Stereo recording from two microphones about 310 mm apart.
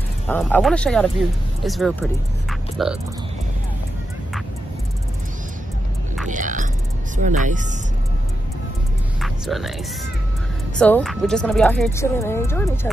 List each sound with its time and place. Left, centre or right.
0.3 s speech: centre
6.2 s a sound: right
7.2 s speech: right
9.2 s music: centre
10.8 s speech: centre